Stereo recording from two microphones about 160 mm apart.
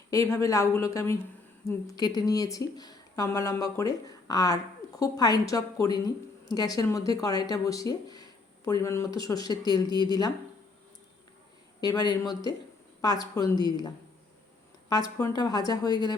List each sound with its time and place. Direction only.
0.1 s speech: 15° left (ahead or behind)
11.8 s speech: 25° left (ahead or behind)